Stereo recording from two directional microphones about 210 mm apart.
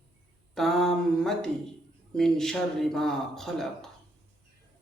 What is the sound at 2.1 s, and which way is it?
Speech, centre (ahead or behind).